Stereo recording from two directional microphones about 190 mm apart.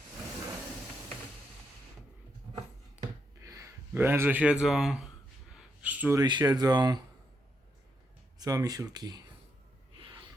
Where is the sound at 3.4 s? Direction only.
15° right (ahead or behind).